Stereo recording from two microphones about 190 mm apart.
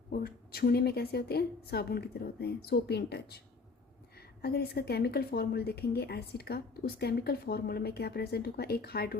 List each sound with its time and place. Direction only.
0.1 s a woman's voice: 55° left (ahead or behind)
4.4 s a woman's voice: 55° left (ahead or behind)